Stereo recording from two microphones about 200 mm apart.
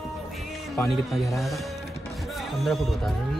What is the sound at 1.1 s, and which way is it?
Music, centre (ahead or behind).